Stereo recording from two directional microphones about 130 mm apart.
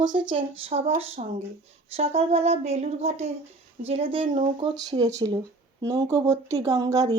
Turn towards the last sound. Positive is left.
turn(degrees=-25)  # may be behind; listen again after turning